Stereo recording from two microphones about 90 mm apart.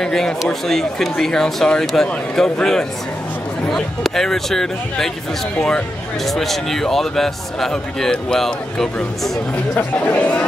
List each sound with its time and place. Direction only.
0.0 s speech: 5° left (ahead or behind)
9.8 s speech: 15° left (ahead or behind)